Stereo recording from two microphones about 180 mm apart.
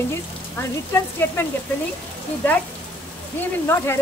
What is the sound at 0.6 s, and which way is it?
Speech, 15° left (ahead or behind).